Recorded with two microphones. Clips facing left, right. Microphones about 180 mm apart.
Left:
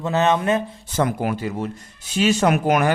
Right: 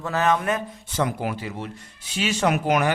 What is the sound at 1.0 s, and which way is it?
Speech, 50° left (ahead or behind).